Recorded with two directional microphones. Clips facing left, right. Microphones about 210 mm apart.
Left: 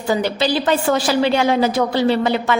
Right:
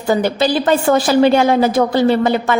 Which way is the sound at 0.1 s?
50° right (ahead or behind).